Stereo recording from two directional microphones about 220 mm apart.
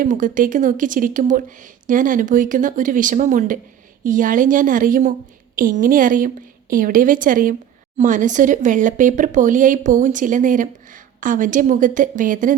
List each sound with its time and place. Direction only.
0.0 s speech: 35° right (ahead or behind)